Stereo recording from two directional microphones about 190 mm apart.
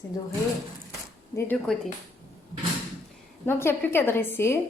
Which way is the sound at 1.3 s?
10° left (ahead or behind).